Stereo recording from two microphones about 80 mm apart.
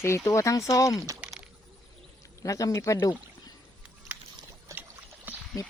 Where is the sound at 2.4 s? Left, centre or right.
Left.